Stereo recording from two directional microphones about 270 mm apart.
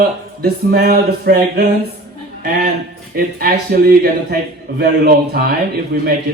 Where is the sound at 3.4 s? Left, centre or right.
Right.